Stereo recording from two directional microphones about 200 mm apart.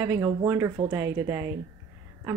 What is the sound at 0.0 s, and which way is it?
Speech, 15° right (ahead or behind).